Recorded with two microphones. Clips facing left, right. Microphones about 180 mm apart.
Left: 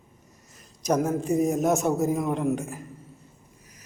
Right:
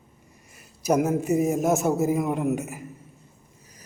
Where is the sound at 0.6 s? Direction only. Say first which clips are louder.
Right 2 dB; 5° right (ahead or behind).